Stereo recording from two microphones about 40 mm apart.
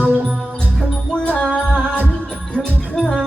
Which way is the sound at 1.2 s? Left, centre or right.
Left.